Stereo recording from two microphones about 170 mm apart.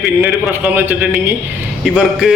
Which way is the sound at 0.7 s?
10° right (ahead or behind).